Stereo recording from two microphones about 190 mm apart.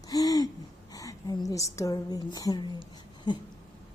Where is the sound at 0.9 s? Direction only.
20° left (ahead or behind).